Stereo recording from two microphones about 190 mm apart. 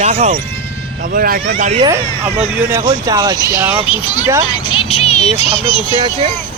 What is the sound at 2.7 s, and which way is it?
Speech, 15° right (ahead or behind).